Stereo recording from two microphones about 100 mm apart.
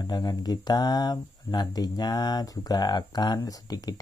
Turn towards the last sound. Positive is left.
turn(degrees=40)  # may be behind; listen again after turning